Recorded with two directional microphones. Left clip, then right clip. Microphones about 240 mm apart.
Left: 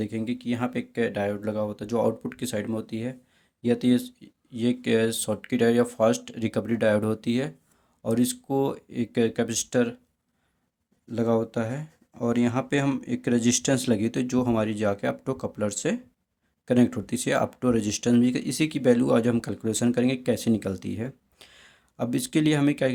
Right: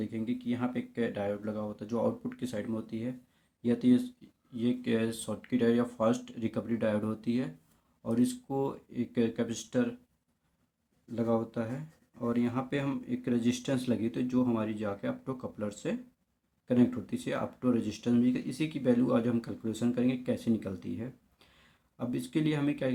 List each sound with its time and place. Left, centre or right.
0.0 s speech: left
11.1 s speech: left